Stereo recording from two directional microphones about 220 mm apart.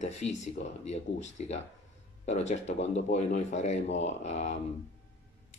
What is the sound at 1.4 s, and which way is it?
Speech, 30° left (ahead or behind).